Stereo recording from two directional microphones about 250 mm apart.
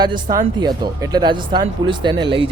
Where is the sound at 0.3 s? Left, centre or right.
Centre.